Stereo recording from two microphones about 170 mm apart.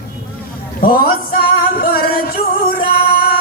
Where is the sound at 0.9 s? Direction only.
60° left (ahead or behind).